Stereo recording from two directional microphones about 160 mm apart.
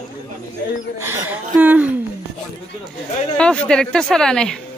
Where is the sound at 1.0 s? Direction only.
15° right (ahead or behind).